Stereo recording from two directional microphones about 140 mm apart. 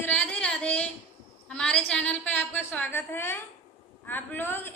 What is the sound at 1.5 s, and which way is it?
A woman's voice, 5° left (ahead or behind).